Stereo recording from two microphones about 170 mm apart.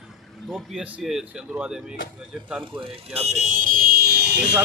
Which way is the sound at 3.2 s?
40° right (ahead or behind).